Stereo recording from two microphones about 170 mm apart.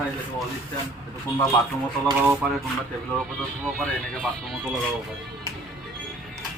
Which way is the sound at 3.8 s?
5° left (ahead or behind).